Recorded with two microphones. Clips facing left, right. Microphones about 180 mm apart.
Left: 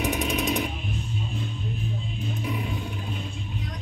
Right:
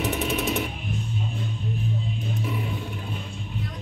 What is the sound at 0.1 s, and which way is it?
Jackhammer, 15° left (ahead or behind).